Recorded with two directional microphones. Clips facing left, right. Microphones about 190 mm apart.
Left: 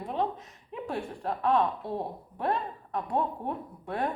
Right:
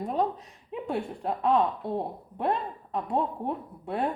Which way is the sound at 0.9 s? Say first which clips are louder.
Right 3 dB; 20° right (ahead or behind).